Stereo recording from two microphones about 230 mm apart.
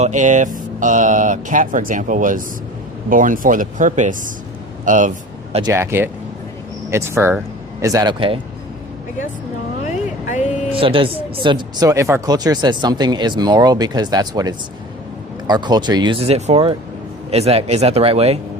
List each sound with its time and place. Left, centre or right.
0.0 s speech: right
5.6 s speech: centre
9.8 s vehicle: left
10.8 s speech: right